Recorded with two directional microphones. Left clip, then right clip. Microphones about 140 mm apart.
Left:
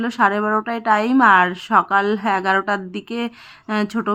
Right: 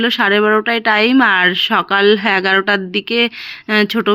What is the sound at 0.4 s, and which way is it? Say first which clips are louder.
Speech: right 7 dB; 35° right (ahead or behind).